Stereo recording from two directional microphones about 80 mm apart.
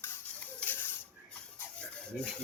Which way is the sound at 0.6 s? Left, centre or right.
Left.